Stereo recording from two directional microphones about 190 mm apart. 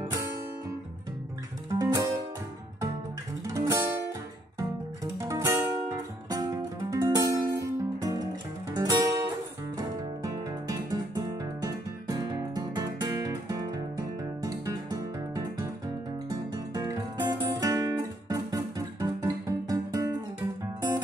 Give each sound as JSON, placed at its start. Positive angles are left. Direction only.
{"t": 0.0, "sound": "music", "side_deg": -20}
{"t": 1.7, "sound": "music", "side_deg": -20}
{"t": 3.4, "sound": "music", "side_deg": -15}